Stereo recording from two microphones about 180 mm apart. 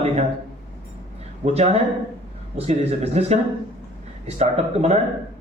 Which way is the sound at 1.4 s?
35° right (ahead or behind).